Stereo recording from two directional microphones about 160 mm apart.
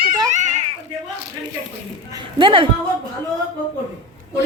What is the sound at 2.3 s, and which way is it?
Speech, 30° right (ahead or behind).